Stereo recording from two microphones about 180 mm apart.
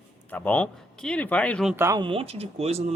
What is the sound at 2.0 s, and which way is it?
Speech, 30° right (ahead or behind).